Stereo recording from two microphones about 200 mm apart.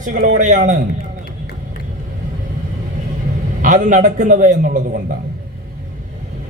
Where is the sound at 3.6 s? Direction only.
40° right (ahead or behind).